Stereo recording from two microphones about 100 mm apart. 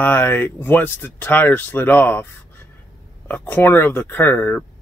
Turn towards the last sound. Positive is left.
turn(degrees=15)  # may be behind; listen again after turning